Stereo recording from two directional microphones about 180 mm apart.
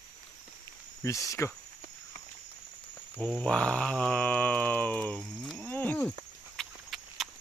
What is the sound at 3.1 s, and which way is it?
Mantra, 5° left (ahead or behind).